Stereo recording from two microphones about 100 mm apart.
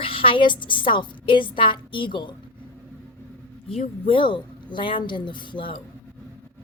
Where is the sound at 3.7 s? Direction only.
70° left (ahead or behind).